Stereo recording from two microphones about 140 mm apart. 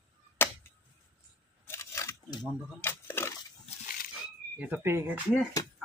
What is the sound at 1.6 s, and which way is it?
Biting, 20° left (ahead or behind).